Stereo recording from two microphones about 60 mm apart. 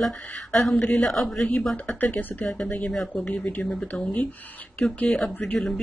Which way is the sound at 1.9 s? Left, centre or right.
Left.